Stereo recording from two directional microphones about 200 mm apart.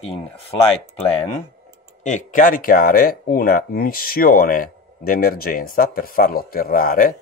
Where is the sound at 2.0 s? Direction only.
40° left (ahead or behind).